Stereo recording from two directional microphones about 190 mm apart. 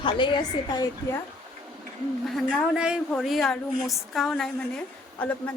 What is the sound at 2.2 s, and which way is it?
Speech, centre (ahead or behind).